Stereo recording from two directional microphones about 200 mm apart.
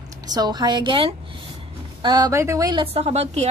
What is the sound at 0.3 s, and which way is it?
A woman's voice, 20° right (ahead or behind).